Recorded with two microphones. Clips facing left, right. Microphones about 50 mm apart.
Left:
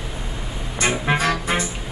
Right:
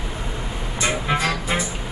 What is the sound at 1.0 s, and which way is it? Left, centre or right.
Music, left.